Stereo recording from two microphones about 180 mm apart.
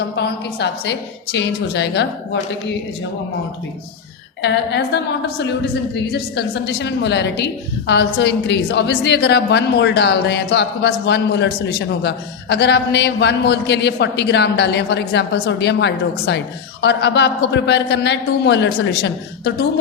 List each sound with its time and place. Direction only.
0.2 s a woman's voice: 70° left (ahead or behind)
4.4 s a woman's voice: 70° left (ahead or behind)